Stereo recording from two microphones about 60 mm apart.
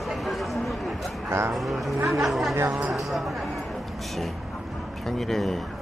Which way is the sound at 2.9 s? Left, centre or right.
Centre.